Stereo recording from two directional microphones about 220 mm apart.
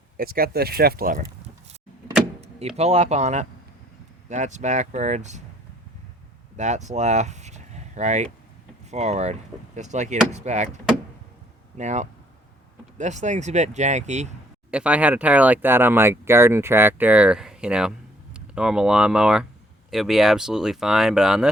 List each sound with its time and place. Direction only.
0.2 s speech: 45° right (ahead or behind)
6.6 s speech: 30° right (ahead or behind)
11.8 s speech: 35° right (ahead or behind)
14.7 s speech: 5° right (ahead or behind)